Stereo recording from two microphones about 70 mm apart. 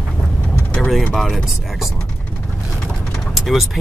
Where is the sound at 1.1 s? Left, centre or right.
Centre.